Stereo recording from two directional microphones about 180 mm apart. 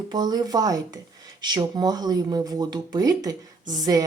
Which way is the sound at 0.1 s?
20° right (ahead or behind).